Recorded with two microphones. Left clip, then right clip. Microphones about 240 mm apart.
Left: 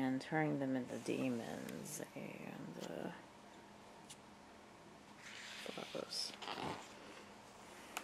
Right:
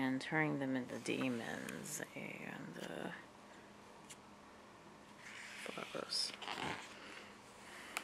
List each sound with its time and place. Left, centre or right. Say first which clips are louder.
0.0 s speech: right 1 dB; centre
5.2 s dog: right 1 dB; centre